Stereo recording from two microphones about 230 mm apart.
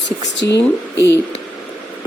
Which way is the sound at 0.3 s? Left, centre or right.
Left.